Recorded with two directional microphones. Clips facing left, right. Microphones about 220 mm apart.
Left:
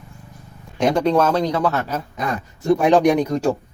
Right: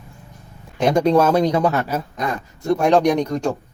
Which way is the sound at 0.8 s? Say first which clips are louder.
Right 1 dB; 10° right (ahead or behind).